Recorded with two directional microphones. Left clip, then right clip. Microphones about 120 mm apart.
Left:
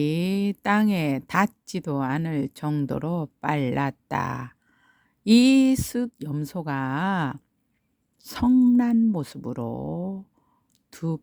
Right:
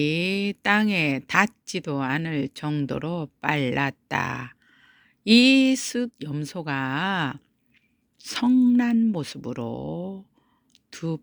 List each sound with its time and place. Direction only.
0.0 s speech: 45° left (ahead or behind)
10.7 s whispering: 45° left (ahead or behind)